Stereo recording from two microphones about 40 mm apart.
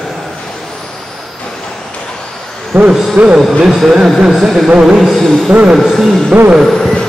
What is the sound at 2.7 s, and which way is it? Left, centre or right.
Speech, right.